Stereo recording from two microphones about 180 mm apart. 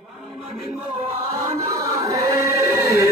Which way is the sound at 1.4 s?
15° right (ahead or behind).